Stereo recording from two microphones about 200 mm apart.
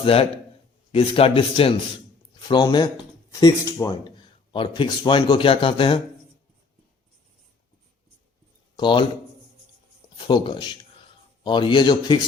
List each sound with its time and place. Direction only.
0.0 s speech: 30° left (ahead or behind)
8.7 s speech: 25° left (ahead or behind)
10.2 s speech: 25° left (ahead or behind)